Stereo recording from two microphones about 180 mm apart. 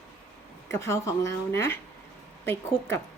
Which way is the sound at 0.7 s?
15° left (ahead or behind).